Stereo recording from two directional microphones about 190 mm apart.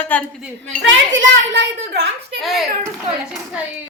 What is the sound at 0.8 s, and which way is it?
A child's voice, 75° right (ahead or behind).